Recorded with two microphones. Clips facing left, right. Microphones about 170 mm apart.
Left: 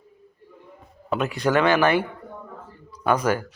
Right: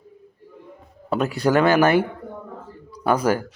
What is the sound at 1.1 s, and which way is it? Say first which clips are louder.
Speech: right 2 dB; 35° right (ahead or behind).